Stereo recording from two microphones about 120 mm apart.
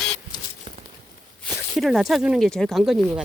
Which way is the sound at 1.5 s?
Centre (ahead or behind).